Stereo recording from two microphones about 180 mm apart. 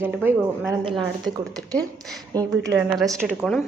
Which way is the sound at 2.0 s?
Centre (ahead or behind).